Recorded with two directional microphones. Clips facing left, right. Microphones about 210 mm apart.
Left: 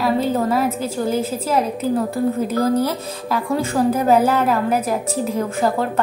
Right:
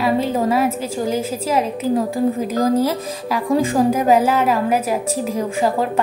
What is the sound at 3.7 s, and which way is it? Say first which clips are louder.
A woman's voice: left 1 dB; 10° right (ahead or behind).